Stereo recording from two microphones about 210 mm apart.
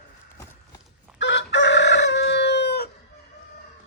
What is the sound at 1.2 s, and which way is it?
Chicken, 55° left (ahead or behind).